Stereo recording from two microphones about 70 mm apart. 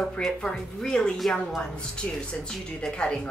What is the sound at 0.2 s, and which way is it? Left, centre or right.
Speech, centre.